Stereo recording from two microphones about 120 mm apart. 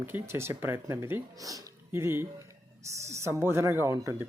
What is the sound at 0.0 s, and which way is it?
Speech, 20° right (ahead or behind).